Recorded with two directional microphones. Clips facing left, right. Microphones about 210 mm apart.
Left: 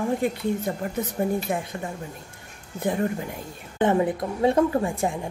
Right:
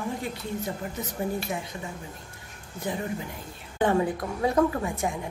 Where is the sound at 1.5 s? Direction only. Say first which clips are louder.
Left 5 dB; 55° left (ahead or behind).